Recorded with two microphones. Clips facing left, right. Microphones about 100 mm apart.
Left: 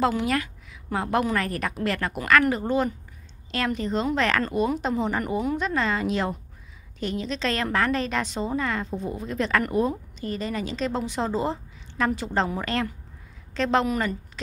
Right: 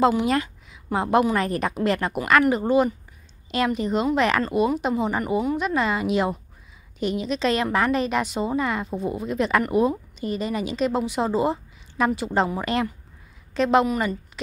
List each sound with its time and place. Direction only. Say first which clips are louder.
0.0 s a woman's voice: right 4 dB; 20° right (ahead or behind)